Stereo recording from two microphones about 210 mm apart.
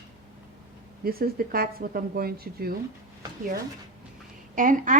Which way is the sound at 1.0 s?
45° right (ahead or behind).